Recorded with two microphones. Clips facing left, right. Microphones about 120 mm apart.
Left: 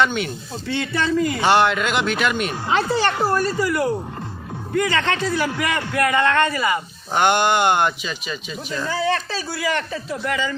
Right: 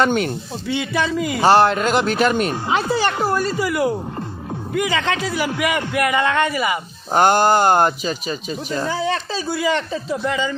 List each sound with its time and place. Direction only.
0.0 s speech: 45° right (ahead or behind)
0.7 s a man's voice: 10° right (ahead or behind)
1.4 s a man's voice: 35° right (ahead or behind)
2.6 s a man's voice: 15° right (ahead or behind)
7.1 s a man's voice: 40° right (ahead or behind)
8.9 s speech: 20° right (ahead or behind)